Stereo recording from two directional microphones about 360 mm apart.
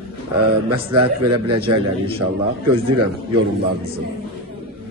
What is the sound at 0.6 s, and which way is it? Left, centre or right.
Speech, right.